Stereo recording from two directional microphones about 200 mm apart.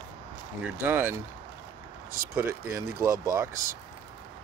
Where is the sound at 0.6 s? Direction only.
10° right (ahead or behind).